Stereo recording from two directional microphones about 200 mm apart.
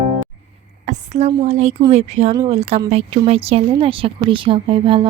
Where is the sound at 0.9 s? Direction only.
35° right (ahead or behind).